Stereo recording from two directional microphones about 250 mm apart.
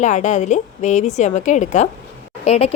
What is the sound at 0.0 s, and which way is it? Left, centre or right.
A woman's voice, left.